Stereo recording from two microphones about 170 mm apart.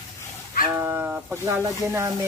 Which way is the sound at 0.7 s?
15° right (ahead or behind).